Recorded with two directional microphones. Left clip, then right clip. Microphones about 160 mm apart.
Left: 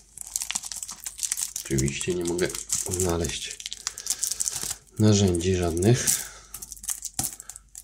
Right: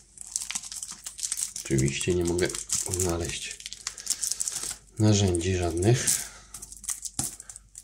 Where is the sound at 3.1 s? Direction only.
25° left (ahead or behind).